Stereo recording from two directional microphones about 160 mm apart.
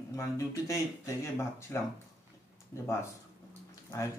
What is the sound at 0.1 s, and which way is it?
Speech, 20° left (ahead or behind).